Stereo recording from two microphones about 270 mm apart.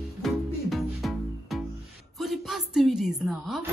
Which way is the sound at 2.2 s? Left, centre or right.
Centre.